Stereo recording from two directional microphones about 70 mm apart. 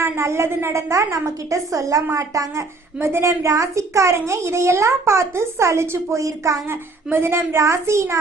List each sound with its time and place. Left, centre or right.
0.0 s a woman's voice: right
3.0 s a child's voice: right
7.1 s a child's voice: right